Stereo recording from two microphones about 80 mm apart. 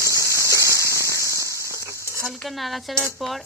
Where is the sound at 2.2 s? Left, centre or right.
Centre.